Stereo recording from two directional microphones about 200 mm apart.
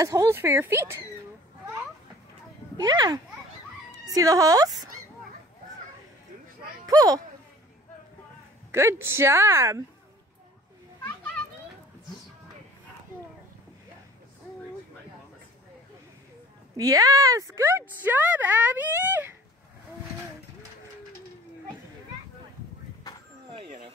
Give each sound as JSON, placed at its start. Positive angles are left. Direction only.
{"t": 0.0, "sound": "speech", "side_deg": -15}
{"t": 2.8, "sound": "a child's voice", "side_deg": -20}
{"t": 6.9, "sound": "speech", "side_deg": -20}
{"t": 8.7, "sound": "speech", "side_deg": -10}
{"t": 16.7, "sound": "speech", "side_deg": -15}
{"t": 23.5, "sound": "a sound", "side_deg": -40}